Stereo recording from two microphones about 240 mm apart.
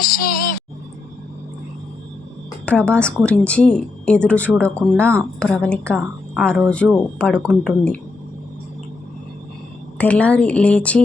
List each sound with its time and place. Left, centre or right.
0.0 s music: left
2.6 s a woman's voice: centre
10.0 s a woman's voice: centre